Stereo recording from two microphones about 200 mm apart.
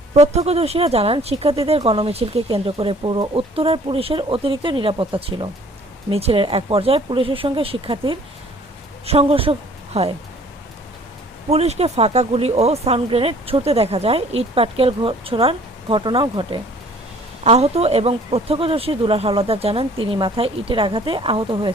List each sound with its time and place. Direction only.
0.1 s a woman's voice: 30° right (ahead or behind)
11.4 s speech: 30° right (ahead or behind)